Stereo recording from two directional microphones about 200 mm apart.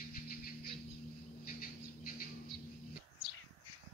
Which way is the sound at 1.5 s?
45° left (ahead or behind).